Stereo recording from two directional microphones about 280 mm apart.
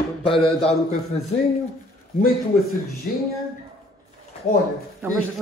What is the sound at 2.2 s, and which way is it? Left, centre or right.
Speech, left.